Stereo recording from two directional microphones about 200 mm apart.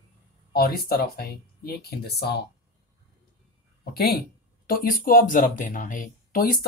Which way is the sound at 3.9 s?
50° left (ahead or behind).